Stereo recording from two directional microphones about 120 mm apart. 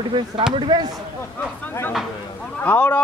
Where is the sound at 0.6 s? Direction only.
40° right (ahead or behind).